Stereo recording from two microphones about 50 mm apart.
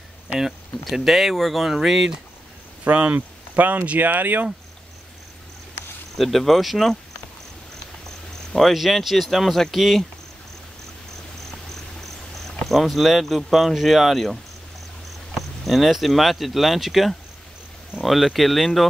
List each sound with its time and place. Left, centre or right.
0.4 s speech: centre
2.8 s speech: right
6.1 s speech: centre
8.5 s speech: centre
12.6 s speech: centre